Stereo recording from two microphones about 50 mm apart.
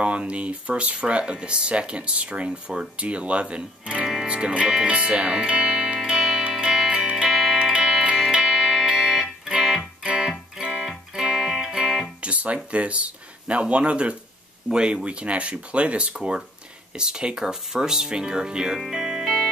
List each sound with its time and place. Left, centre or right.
0.0 s speech: right
6.1 s music: centre
9.8 s music: centre
10.6 s music: centre
12.2 s guitar: right
12.7 s speech: right
18.8 s music: centre